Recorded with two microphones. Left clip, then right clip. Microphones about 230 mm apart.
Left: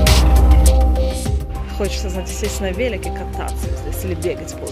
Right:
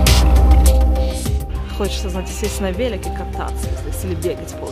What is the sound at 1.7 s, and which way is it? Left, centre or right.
Speech, centre.